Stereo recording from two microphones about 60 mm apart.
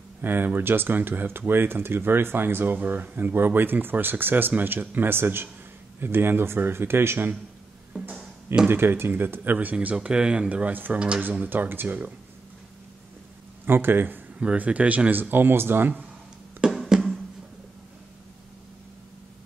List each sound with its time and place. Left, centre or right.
0.2 s speech: right
8.6 s speech: right
9.9 s speech: centre; by 12.1 s right
13.7 s speech: right
14.4 s speech: right
16.8 s music: centre